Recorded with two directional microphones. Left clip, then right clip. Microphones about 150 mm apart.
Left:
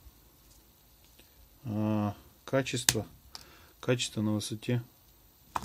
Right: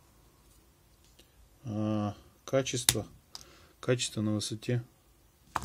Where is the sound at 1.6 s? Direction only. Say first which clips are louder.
Left 1 dB; 20° left (ahead or behind).